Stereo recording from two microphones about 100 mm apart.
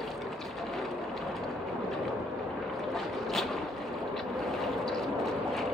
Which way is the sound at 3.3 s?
Centre (ahead or behind).